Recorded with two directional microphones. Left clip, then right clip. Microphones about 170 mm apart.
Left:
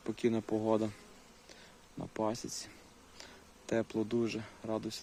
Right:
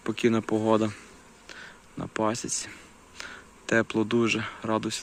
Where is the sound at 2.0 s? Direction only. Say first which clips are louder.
Right 8 dB; 5° left (ahead or behind).